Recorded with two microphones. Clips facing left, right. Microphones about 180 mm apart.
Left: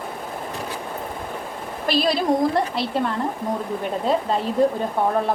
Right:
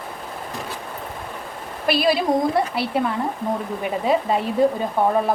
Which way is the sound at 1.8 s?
5° right (ahead or behind).